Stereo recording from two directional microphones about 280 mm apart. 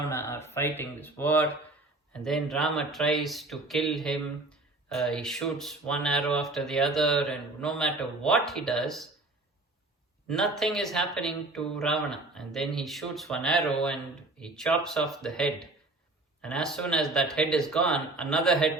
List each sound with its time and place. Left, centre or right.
0.1 s speech: centre
10.2 s speech: centre